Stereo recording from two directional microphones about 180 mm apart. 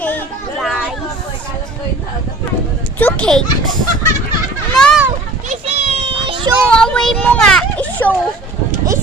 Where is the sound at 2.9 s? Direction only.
10° left (ahead or behind).